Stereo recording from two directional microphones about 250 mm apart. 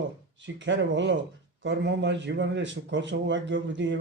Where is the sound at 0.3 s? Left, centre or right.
Right.